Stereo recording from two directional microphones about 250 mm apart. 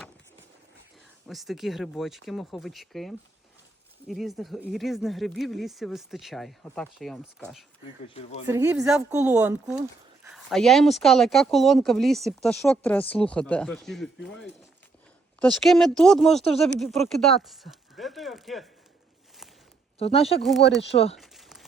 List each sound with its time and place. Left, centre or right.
1.3 s speech: centre
8.0 s speech: left
8.4 s speech: centre
20.2 s speech: centre
21.2 s a sound: centre